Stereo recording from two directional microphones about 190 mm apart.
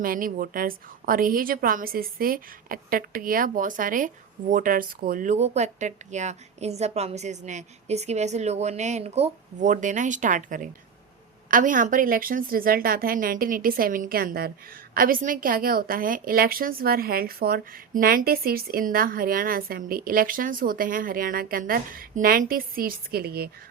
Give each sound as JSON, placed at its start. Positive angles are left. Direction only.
{"t": 0.0, "sound": "a woman's voice", "side_deg": -50}